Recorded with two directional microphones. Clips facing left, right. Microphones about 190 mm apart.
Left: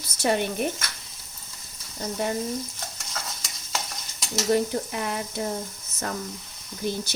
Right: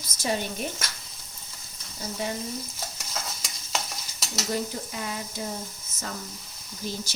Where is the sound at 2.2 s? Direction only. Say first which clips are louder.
Left 4 dB; 55° left (ahead or behind).